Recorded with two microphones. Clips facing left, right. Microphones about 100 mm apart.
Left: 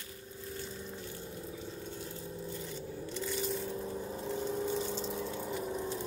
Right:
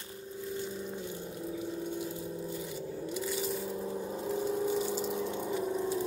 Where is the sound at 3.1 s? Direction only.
5° right (ahead or behind).